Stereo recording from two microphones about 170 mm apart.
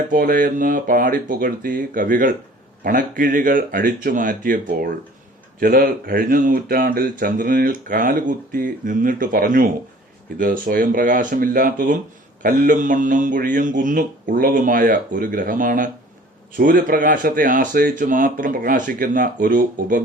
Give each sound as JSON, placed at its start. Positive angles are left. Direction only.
{"t": 0.1, "sound": "a man's voice", "side_deg": -55}